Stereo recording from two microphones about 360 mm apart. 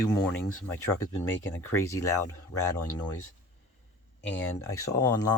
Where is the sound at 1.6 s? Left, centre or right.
Centre.